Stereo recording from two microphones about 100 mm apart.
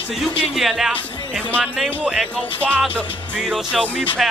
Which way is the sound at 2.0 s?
10° right (ahead or behind).